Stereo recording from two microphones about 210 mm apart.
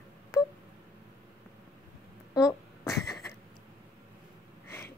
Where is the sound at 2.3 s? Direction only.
15° left (ahead or behind).